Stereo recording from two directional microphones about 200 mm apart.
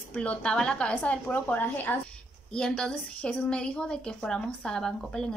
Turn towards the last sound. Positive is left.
turn(degrees=5)  # may be behind; listen again after turning